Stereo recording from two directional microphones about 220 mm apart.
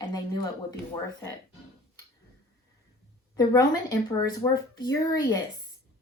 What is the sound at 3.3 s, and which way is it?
A woman's voice, 15° left (ahead or behind).